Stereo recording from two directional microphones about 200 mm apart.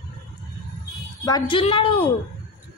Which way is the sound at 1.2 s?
20° left (ahead or behind).